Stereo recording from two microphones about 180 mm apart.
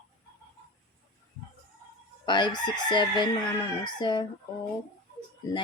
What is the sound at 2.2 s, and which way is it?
Chicken, 25° left (ahead or behind).